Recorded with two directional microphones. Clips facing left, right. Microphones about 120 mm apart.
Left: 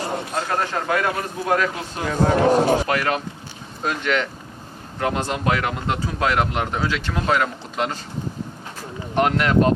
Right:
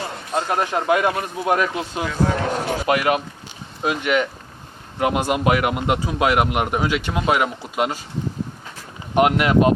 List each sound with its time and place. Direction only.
0.3 s speech: 15° right (ahead or behind)
2.0 s speech: 40° left (ahead or behind)
2.8 s speech: 15° right (ahead or behind)
9.1 s speech: 10° right (ahead or behind)